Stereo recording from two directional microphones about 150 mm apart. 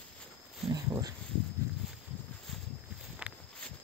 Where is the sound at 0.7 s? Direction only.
25° right (ahead or behind).